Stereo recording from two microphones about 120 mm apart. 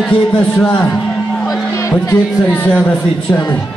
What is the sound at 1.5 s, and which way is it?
Music, 25° left (ahead or behind).